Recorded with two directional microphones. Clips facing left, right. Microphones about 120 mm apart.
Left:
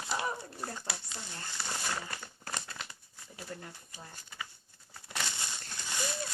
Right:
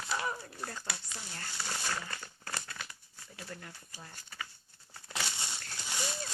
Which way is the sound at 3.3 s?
25° left (ahead or behind).